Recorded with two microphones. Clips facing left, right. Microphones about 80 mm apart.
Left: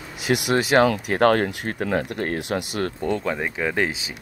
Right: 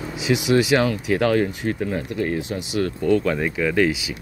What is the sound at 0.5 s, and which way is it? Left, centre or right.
Speech, left.